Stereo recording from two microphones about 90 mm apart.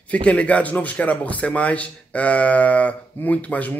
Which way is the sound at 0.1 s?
15° left (ahead or behind).